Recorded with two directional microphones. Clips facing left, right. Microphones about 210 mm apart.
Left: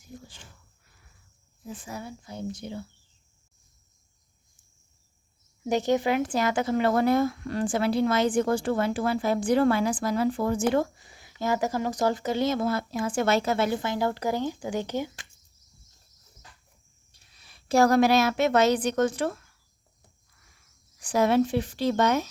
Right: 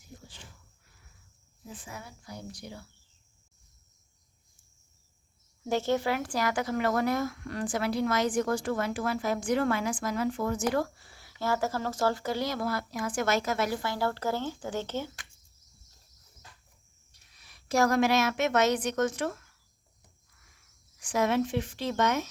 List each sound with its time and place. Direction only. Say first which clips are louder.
1.7 s speech: left 7 dB; 35° left (ahead or behind)
5.6 s speech: left 4 dB; 15° left (ahead or behind)
17.1 s a woman's voice: left 2 dB; 30° left (ahead or behind)
21.0 s speech: left 5 dB; 35° left (ahead or behind)